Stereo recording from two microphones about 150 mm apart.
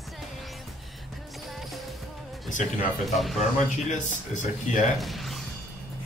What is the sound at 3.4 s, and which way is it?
Speech, 50° left (ahead or behind).